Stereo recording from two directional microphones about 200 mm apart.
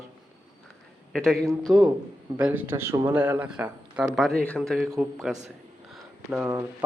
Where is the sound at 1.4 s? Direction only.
15° right (ahead or behind).